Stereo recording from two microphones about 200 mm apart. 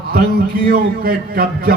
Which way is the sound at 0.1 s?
50° right (ahead or behind).